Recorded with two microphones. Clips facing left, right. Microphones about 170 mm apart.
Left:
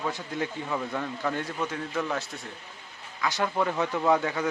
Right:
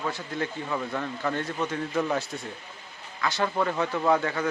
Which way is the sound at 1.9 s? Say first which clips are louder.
Right 3 dB; 10° right (ahead or behind).